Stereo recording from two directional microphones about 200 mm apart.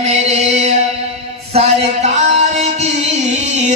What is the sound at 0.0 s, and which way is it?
Chant, 35° right (ahead or behind).